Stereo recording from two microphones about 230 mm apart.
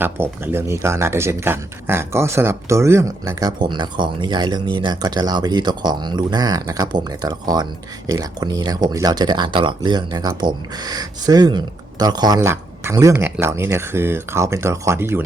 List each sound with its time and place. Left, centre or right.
0.0 s speech: centre